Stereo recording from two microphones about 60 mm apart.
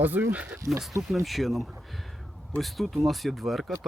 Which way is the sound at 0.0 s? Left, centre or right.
Right.